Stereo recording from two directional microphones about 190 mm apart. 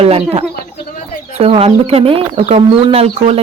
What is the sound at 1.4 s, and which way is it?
Speech, 30° right (ahead or behind).